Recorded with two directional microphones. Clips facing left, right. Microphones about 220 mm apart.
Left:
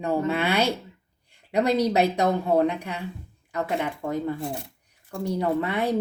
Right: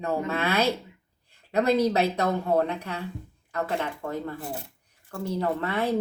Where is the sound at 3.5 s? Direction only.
15° left (ahead or behind).